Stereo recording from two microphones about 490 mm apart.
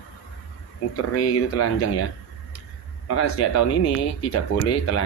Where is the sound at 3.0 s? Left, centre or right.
Left.